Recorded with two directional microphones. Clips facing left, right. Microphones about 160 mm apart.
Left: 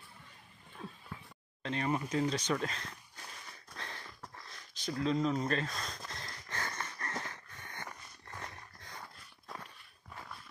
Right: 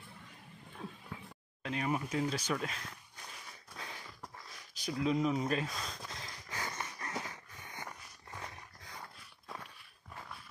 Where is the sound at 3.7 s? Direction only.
5° right (ahead or behind).